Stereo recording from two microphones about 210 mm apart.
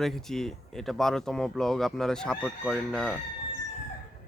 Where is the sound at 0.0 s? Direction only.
Centre (ahead or behind).